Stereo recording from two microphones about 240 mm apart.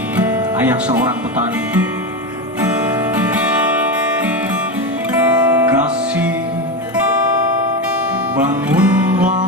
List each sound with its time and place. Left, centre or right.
0.2 s music: centre
3.3 s music: centre
5.1 s music: centre
8.4 s music: centre